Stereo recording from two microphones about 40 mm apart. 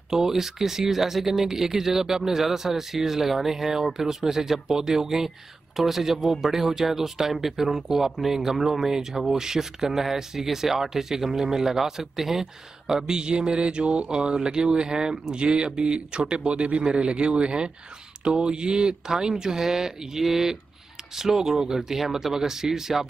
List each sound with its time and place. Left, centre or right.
0.1 s speech: centre